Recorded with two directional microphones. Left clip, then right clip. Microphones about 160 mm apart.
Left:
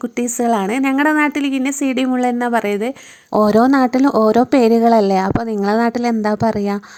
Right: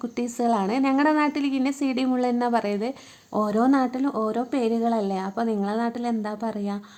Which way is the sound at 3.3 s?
50° left (ahead or behind).